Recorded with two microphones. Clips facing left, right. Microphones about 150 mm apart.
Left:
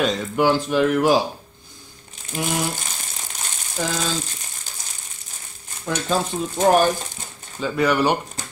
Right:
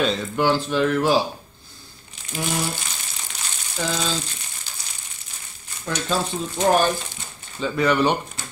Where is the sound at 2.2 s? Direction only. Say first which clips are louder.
Left 1 dB; 45° left (ahead or behind).